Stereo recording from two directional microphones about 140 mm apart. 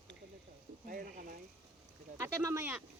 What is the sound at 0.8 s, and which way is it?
Speech, 90° right.